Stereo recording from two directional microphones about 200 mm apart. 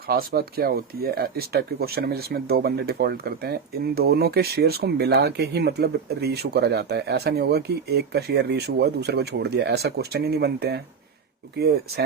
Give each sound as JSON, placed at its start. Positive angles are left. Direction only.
{"t": 0.1, "sound": "speech", "side_deg": -50}